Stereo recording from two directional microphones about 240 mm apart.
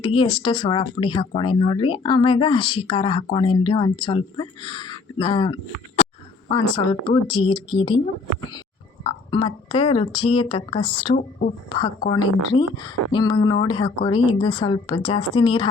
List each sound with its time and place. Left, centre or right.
0.0 s speech: left
9.0 s speech: left
11.2 s a woman's voice: left
12.0 s speech: centre